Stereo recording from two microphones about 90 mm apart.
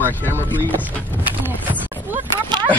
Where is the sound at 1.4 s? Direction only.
20° right (ahead or behind).